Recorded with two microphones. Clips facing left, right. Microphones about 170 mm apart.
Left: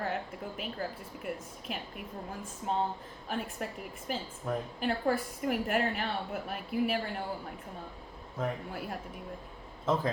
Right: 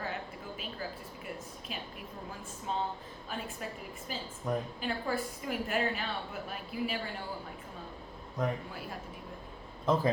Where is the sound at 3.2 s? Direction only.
60° left (ahead or behind).